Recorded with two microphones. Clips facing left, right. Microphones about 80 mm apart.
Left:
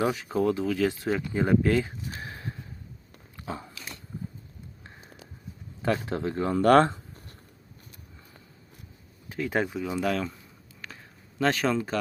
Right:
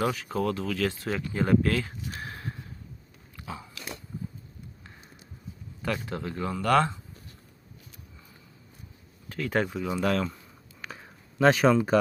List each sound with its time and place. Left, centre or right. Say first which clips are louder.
0.0 s speech: left 2 dB; left
3.4 s dog: left 3 dB; left
5.8 s speech: left 4 dB; left
9.3 s speech: even; centre
10.8 s a sound: right 3 dB; centre